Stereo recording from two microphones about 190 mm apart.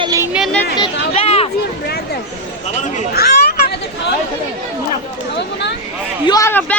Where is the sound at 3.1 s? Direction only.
55° left (ahead or behind).